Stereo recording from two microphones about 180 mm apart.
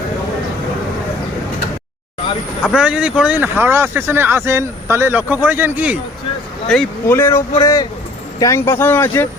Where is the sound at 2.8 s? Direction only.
5° right (ahead or behind).